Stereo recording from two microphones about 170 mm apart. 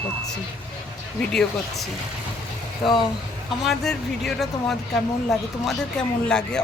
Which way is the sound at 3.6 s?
Centre (ahead or behind).